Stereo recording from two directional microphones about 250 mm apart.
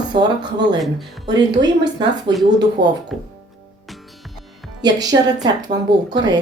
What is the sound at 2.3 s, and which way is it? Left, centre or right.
Speech, centre.